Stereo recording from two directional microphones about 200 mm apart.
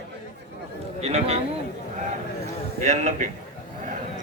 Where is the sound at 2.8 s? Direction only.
35° right (ahead or behind).